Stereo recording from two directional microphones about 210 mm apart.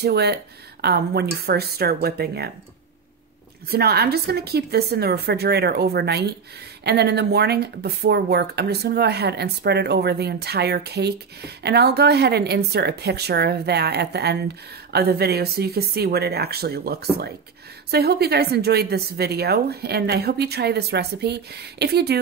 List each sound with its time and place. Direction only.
0.0 s speech: 50° right (ahead or behind)
3.7 s speech: 50° right (ahead or behind)